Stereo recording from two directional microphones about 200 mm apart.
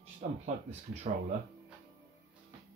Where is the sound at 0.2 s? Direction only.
40° right (ahead or behind).